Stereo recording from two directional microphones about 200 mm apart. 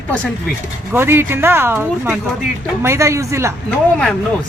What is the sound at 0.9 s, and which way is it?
Speech, 10° right (ahead or behind).